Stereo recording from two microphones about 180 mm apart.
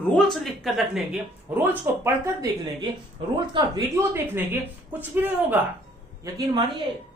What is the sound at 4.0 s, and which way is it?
Speech, 10° right (ahead or behind).